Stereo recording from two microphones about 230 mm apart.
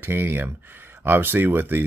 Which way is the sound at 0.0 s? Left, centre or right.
Centre.